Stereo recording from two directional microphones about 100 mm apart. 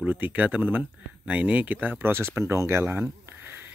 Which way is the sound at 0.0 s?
15° right (ahead or behind).